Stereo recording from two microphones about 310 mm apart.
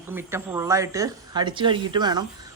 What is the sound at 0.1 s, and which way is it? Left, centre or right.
Speech, centre.